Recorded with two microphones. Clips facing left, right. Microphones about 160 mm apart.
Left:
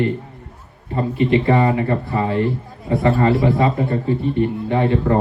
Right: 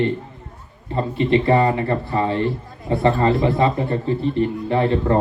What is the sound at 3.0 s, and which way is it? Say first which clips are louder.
Speech: left 1 dB; 30° right (ahead or behind).